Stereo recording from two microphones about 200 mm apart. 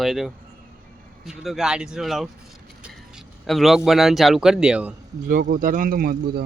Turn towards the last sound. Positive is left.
turn(degrees=-50)  # may be behind; listen again after turning